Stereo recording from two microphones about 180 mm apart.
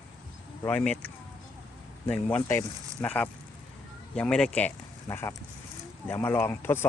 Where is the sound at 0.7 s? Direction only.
10° left (ahead or behind).